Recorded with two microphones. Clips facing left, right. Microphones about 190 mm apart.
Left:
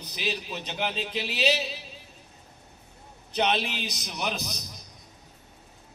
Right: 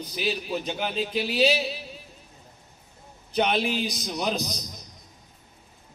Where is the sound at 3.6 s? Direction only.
15° right (ahead or behind).